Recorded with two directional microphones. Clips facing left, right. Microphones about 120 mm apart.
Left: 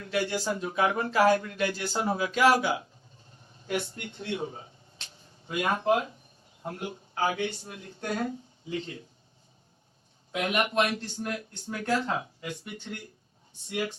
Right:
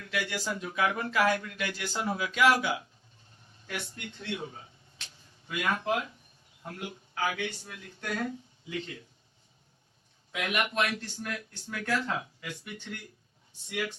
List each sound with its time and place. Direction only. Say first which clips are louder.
0.0 s speech: left 5 dB; 35° left (ahead or behind)
10.3 s speech: left 4 dB; 30° left (ahead or behind)